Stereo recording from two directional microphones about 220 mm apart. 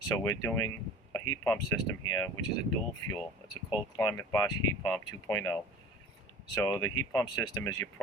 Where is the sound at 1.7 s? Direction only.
10° left (ahead or behind).